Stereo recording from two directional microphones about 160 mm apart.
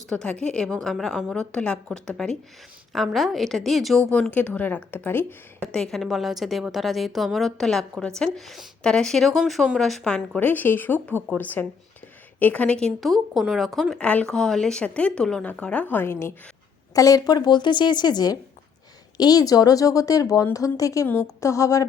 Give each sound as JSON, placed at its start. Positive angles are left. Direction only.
{"t": 0.1, "sound": "a woman's voice", "side_deg": 5}